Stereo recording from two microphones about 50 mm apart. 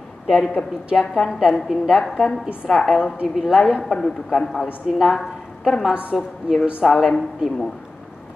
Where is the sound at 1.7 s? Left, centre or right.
Centre.